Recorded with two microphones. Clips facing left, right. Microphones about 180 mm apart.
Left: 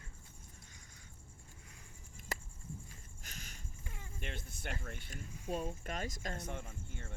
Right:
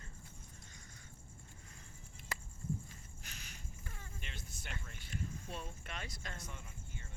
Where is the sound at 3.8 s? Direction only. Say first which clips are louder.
Left 2 dB; 15° left (ahead or behind).